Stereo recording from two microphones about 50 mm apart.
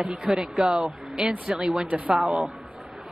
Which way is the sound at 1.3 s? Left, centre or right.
Right.